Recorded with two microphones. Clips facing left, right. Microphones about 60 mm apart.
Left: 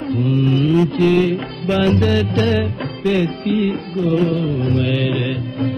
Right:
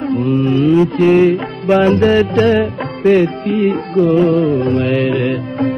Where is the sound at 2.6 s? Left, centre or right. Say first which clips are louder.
Right 6 dB; right.